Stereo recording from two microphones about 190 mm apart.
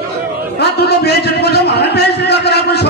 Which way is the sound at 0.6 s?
60° left (ahead or behind).